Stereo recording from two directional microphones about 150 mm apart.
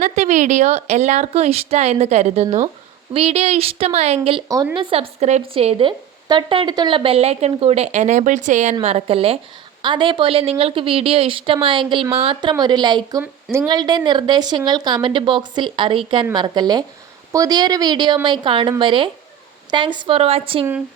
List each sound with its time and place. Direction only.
0.0 s a woman's voice: 55° right (ahead or behind); by 13.2 s 25° right (ahead or behind)
13.2 s speech: 15° right (ahead or behind)
13.7 s a woman's voice: 30° right (ahead or behind)